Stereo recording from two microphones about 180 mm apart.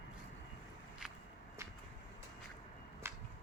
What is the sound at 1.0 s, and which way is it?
Walk, 5° right (ahead or behind).